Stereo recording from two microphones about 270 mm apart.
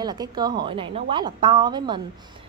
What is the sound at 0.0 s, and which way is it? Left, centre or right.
A woman's voice, centre.